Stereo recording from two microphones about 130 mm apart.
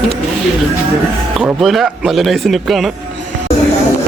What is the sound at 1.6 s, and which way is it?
Speech, centre (ahead or behind).